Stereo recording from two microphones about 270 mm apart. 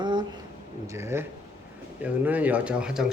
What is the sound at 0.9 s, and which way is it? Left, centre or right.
Speech, centre.